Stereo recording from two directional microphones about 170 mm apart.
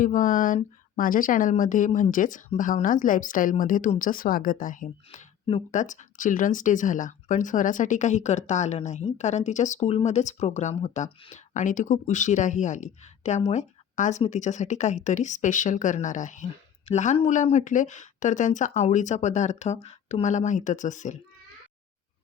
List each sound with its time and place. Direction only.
0.0 s speech: 50° left (ahead or behind)